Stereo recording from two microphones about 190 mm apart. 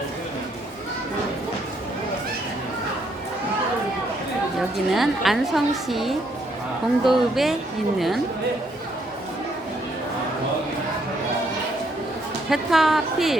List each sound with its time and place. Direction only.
4.9 s a woman's voice: centre (ahead or behind)
12.5 s a woman's voice: centre (ahead or behind)